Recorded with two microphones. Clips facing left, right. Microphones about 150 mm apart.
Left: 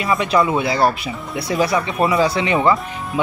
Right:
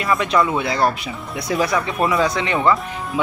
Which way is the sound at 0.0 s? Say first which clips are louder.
Left 1 dB; centre (ahead or behind).